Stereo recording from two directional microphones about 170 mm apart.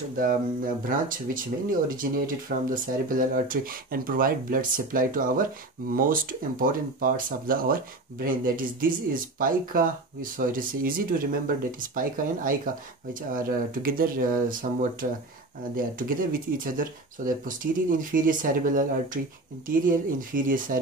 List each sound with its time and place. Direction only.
0.2 s speech: 55° right (ahead or behind)
6.6 s speech: 55° right (ahead or behind)